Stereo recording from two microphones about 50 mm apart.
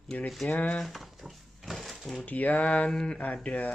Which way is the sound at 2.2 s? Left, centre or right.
Left.